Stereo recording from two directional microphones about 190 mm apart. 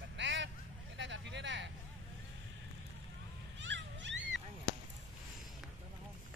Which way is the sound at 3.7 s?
70° right (ahead or behind).